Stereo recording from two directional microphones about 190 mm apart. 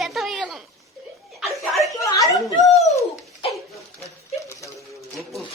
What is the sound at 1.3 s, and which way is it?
Chuckle, centre (ahead or behind).